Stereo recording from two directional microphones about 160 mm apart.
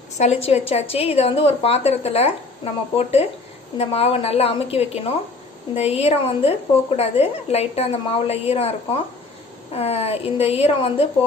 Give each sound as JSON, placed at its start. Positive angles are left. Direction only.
{"t": 0.2, "sound": "a woman's voice", "side_deg": 40}